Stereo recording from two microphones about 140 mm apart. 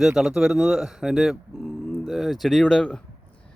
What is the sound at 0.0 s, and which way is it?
A man's voice, centre (ahead or behind).